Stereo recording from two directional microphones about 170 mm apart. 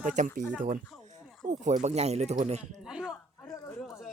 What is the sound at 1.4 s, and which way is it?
Speech, 45° right (ahead or behind).